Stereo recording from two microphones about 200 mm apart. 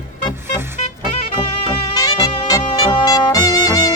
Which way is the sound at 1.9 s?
20° left (ahead or behind).